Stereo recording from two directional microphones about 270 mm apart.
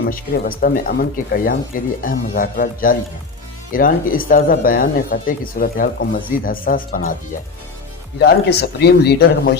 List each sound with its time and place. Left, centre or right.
0.0 s speech: left
8.2 s speech: left